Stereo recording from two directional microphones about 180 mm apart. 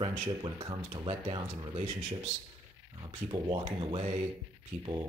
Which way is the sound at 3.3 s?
30° right (ahead or behind).